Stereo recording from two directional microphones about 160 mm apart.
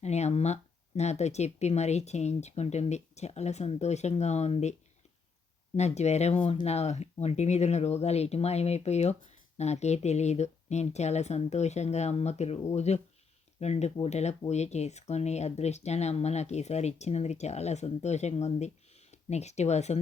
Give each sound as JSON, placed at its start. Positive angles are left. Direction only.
{"t": 0.0, "sound": "speech", "side_deg": 45}
{"t": 5.7, "sound": "speech", "side_deg": 45}